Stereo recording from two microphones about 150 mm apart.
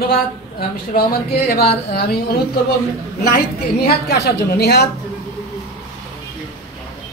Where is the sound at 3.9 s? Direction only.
90° left.